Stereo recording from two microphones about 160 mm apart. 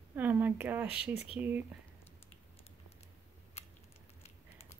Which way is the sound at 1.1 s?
40° left (ahead or behind).